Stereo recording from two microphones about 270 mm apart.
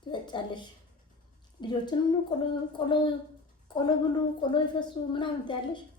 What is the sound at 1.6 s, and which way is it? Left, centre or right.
Speech, centre.